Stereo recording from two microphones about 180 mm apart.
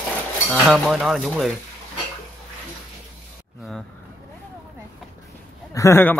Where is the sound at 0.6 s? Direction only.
Centre (ahead or behind).